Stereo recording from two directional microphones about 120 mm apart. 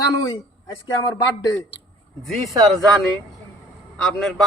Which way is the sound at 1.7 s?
50° left (ahead or behind).